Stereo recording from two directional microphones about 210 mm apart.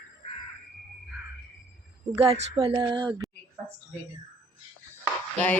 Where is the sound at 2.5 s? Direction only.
25° right (ahead or behind).